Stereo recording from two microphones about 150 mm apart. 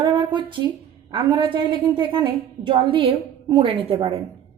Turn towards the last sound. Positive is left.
turn(degrees=-35)  # may be behind; listen again after turning